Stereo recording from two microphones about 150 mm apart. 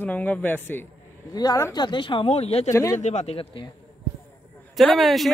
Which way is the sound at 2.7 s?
20° left (ahead or behind).